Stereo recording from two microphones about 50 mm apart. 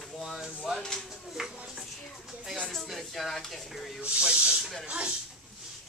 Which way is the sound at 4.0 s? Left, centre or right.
Centre.